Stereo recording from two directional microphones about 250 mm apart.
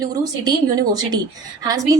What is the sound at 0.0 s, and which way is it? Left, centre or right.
A woman's voice, centre.